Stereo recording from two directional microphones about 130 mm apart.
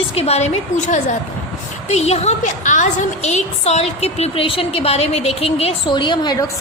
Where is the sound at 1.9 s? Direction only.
55° left (ahead or behind).